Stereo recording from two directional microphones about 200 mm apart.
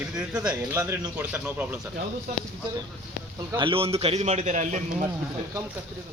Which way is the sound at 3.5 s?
25° right (ahead or behind).